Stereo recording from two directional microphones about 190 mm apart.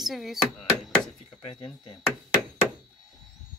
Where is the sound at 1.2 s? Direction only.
20° left (ahead or behind).